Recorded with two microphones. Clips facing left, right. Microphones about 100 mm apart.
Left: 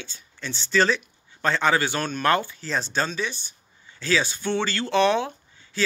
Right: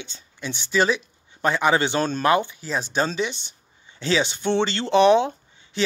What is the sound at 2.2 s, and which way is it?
A man's voice, 15° right (ahead or behind).